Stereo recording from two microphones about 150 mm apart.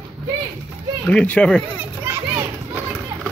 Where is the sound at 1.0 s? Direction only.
5° left (ahead or behind).